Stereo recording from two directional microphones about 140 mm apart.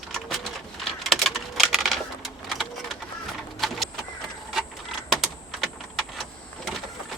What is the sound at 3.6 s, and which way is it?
Vehicle, centre (ahead or behind).